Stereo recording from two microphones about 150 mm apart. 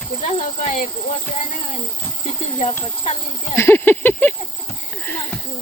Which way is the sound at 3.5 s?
15° left (ahead or behind).